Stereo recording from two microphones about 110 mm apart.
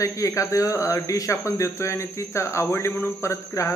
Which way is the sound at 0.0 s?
30° left (ahead or behind).